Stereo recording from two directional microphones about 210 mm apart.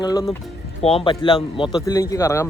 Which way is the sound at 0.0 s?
20° left (ahead or behind).